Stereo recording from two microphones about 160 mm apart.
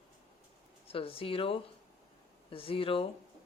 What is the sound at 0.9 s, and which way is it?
Speech, 35° left (ahead or behind).